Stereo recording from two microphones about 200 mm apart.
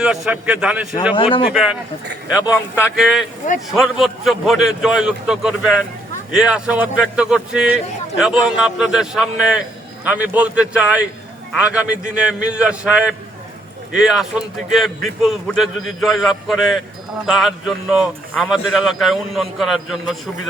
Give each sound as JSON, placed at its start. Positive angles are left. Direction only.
{"t": 0.3, "sound": "a man's voice", "side_deg": -5}
{"t": 1.1, "sound": "speech", "side_deg": 25}
{"t": 1.5, "sound": "a man's voice", "side_deg": -5}
{"t": 2.4, "sound": "a man's voice", "side_deg": 10}
{"t": 2.9, "sound": "a man's voice", "side_deg": 0}